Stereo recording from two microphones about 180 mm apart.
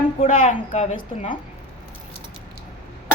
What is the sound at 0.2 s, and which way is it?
Speech, 40° left (ahead or behind).